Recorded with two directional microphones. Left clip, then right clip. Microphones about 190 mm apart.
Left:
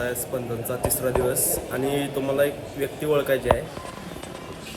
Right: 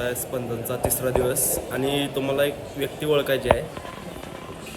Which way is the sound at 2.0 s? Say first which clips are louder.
Left 1 dB; 10° right (ahead or behind).